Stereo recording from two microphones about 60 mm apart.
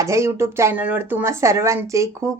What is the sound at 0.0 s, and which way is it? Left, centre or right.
Speech, right.